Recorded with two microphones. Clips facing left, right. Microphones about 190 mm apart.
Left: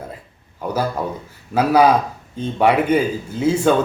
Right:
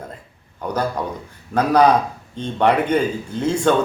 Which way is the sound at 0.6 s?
5° left (ahead or behind).